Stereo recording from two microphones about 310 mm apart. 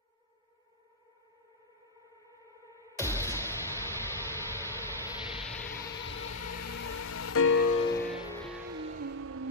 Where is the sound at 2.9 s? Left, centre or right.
Centre.